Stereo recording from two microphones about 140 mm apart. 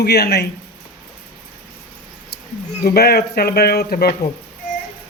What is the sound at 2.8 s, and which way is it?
Speech, 90° left.